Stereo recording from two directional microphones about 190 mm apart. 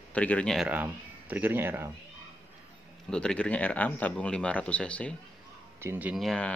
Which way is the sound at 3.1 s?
5° left (ahead or behind).